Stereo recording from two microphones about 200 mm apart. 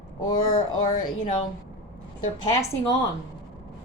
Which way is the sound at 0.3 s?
20° left (ahead or behind).